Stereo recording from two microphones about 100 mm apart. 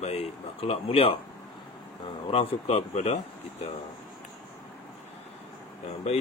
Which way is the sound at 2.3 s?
80° left.